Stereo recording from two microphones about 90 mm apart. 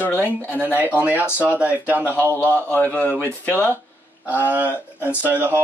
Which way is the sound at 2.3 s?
20° left (ahead or behind).